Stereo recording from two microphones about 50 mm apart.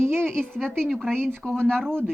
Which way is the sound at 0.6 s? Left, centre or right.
Centre.